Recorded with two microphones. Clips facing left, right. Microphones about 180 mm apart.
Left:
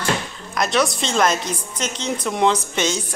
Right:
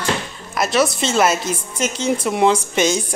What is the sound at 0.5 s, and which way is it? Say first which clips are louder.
A woman's voice: right 2 dB; 5° right (ahead or behind).